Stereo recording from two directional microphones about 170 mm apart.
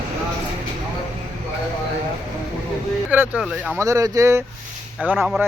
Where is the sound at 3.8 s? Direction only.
20° right (ahead or behind).